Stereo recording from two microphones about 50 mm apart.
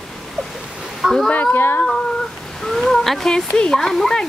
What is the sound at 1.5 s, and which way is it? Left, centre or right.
Speech, left.